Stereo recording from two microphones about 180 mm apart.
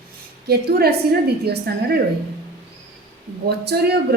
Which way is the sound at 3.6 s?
65° right (ahead or behind).